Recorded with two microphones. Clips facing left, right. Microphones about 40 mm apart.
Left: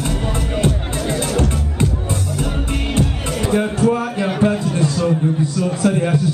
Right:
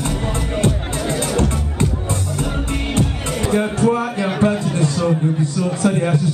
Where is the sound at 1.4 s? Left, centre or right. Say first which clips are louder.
Even; left.